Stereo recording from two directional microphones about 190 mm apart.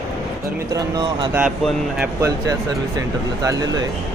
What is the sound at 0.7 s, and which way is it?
Speech, 20° right (ahead or behind).